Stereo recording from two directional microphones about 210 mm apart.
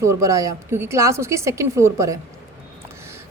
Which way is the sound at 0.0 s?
15° right (ahead or behind).